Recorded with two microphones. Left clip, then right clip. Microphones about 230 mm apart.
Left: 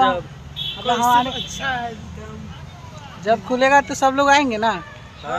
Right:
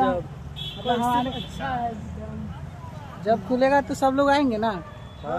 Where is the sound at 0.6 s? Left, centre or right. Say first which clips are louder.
Left 8 dB; right.